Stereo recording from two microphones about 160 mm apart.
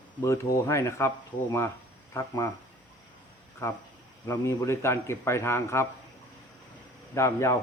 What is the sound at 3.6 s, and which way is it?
A man's voice, 15° left (ahead or behind).